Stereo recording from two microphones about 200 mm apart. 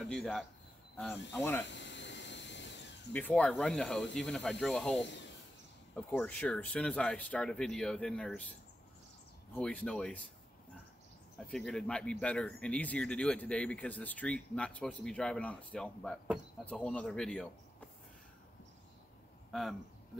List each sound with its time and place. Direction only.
0.0 s speech: centre (ahead or behind)
1.7 s a sound: 60° left (ahead or behind)
3.1 s speech: 10° left (ahead or behind)
9.5 s speech: 5° left (ahead or behind)
11.3 s speech: 5° left (ahead or behind)
19.5 s speech: centre (ahead or behind)